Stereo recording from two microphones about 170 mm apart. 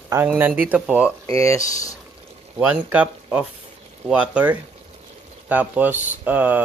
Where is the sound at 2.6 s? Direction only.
10° right (ahead or behind).